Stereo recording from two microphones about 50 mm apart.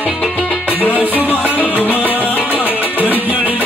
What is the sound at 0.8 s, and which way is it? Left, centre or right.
Music, left.